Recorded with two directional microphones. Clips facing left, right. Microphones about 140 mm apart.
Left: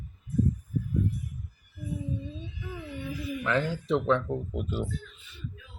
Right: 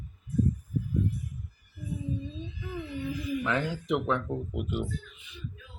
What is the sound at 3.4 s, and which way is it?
Speech, 15° right (ahead or behind).